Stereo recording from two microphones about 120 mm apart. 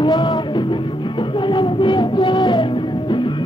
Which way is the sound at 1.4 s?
40° left (ahead or behind).